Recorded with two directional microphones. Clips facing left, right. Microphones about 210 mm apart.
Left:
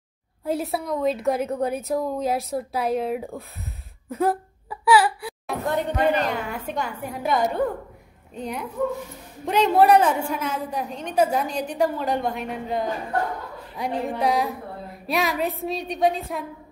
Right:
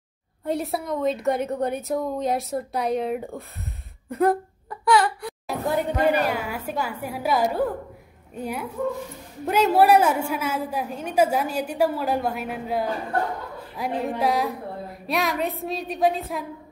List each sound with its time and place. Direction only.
0.5 s a woman's voice: centre (ahead or behind)
4.1 s whimper: centre (ahead or behind)
5.7 s a woman's voice: 5° right (ahead or behind)